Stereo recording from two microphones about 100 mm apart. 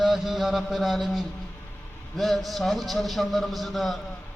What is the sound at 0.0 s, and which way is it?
Mantra, centre (ahead or behind).